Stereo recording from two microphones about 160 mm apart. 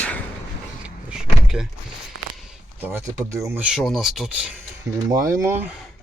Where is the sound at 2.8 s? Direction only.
15° right (ahead or behind).